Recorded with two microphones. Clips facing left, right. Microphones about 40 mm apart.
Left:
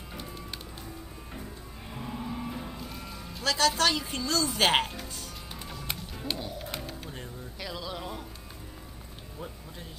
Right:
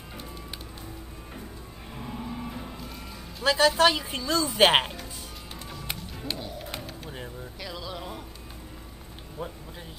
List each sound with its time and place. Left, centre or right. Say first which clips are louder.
1.9 s music: even; centre
3.4 s a woman's voice: right 5 dB; centre
5.7 s music: right 1 dB; centre
7.6 s a sound: left 1 dB; centre